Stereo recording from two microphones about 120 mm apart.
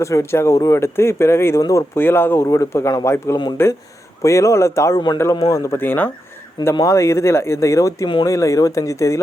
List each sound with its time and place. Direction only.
0.0 s speech: 25° left (ahead or behind)
5.7 s speech: 15° left (ahead or behind)